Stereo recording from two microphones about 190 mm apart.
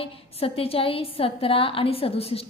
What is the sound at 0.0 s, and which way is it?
A woman's voice, 30° left (ahead or behind).